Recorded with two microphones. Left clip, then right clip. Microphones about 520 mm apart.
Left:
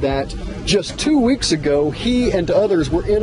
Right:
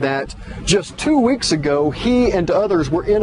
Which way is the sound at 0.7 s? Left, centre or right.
Right.